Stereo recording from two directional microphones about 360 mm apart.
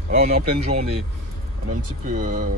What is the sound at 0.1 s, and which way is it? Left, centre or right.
Speech, right.